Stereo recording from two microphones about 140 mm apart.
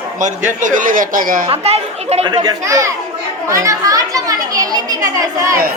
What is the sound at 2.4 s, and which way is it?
A child's voice, 25° right (ahead or behind).